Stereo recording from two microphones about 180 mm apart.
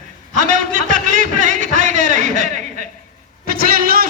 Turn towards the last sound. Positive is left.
turn(degrees=-55)  # may be behind; listen again after turning